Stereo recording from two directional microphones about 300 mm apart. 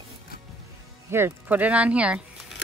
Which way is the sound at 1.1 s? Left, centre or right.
Centre.